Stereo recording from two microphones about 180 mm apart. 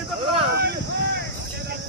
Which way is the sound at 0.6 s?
65° right (ahead or behind).